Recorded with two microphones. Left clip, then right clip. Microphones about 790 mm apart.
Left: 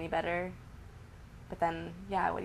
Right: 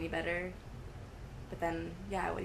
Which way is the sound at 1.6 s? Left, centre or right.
Left.